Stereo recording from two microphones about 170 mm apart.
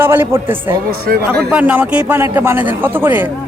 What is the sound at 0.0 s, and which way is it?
Speech, 10° right (ahead or behind).